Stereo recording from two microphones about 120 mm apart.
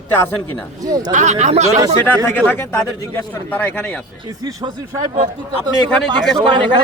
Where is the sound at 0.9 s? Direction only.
30° right (ahead or behind).